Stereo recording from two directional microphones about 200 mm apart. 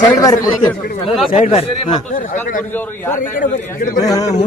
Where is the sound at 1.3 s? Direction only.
35° left (ahead or behind).